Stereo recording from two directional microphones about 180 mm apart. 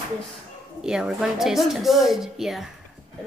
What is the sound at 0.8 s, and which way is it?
A woman's voice, 5° right (ahead or behind).